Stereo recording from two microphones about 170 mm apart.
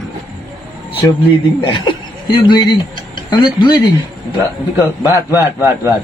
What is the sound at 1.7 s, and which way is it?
Speech, 25° left (ahead or behind).